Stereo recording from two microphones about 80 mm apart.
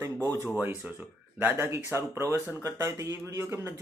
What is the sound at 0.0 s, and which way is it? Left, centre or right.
Speech, right.